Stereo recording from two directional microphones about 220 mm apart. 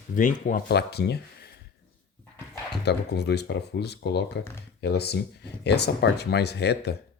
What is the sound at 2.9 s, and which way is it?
Speech, 50° left (ahead or behind).